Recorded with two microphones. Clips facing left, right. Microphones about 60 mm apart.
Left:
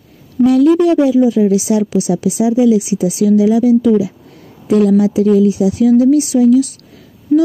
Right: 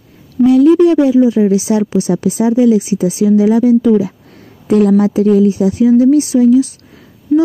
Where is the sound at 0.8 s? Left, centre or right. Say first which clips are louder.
Right 2 dB; right.